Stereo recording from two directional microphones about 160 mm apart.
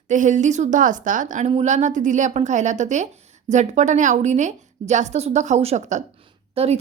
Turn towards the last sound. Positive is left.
turn(degrees=-40)  # may be behind; listen again after turning